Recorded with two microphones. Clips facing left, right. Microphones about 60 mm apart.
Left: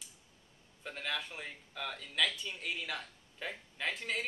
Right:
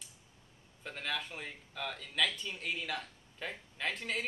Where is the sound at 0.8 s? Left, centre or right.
Centre.